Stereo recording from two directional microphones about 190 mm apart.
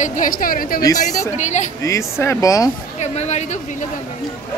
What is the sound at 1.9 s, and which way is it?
Speech, 15° left (ahead or behind).